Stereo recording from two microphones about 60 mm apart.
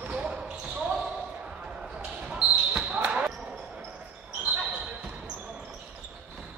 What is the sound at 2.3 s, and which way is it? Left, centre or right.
Basketball bounce, right.